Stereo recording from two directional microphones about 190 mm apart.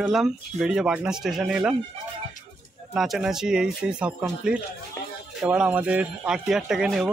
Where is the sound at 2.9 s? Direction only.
Centre (ahead or behind).